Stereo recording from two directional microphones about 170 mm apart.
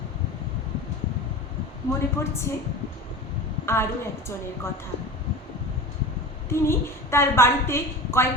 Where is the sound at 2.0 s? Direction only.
15° left (ahead or behind).